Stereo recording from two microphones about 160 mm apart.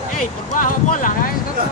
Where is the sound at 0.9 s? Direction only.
55° left (ahead or behind).